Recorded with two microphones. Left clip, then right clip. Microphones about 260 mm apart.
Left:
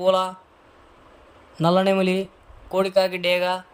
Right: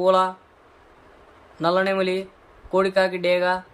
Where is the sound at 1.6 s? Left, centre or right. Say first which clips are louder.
Left 1 dB; left.